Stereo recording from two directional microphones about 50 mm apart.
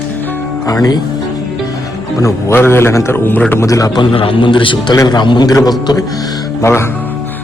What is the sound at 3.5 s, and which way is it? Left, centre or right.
Speech, left.